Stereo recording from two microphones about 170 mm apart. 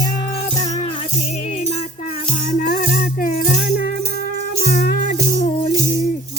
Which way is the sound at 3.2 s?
55° left (ahead or behind).